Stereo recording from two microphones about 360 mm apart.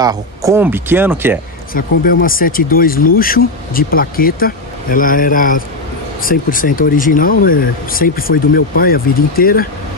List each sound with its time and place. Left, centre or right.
0.0 s speech: centre
1.7 s speech: left